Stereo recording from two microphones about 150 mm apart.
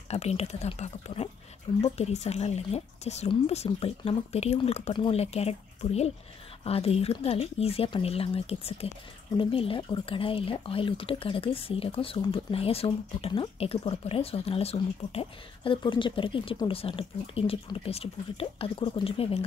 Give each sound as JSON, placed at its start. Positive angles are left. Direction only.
{"t": 0.1, "sound": "speech", "side_deg": 45}